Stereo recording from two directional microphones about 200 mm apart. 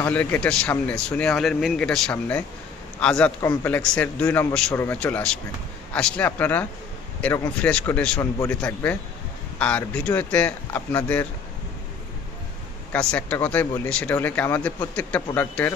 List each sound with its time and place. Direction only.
0.0 s a man's voice: 10° left (ahead or behind)
12.9 s speech: 5° left (ahead or behind)